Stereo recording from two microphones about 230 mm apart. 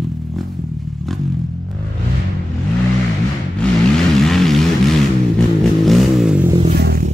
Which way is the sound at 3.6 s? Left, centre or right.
Centre.